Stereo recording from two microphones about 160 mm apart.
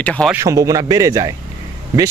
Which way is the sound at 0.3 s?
20° right (ahead or behind).